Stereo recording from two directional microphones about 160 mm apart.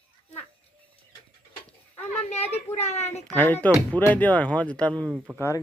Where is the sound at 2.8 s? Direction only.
40° left (ahead or behind).